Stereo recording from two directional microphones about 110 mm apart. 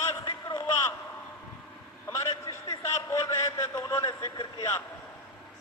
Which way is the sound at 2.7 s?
35° left (ahead or behind).